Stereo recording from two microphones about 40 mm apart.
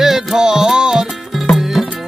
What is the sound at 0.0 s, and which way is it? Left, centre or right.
Music, centre.